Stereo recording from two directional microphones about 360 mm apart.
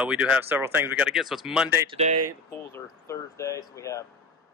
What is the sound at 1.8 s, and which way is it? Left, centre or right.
Speech, centre.